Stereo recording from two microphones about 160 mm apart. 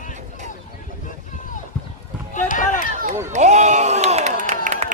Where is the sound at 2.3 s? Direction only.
55° left (ahead or behind).